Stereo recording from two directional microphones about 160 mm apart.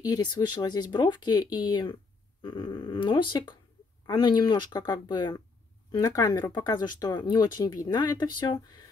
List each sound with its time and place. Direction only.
0.0 s speech: 25° left (ahead or behind)